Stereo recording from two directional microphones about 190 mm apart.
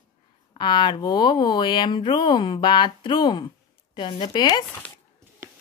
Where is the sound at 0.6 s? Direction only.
25° left (ahead or behind).